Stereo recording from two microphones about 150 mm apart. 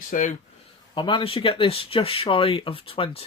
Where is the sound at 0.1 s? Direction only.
60° left (ahead or behind).